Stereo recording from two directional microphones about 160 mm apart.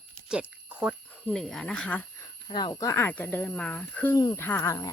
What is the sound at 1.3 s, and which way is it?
Speech, 5° left (ahead or behind).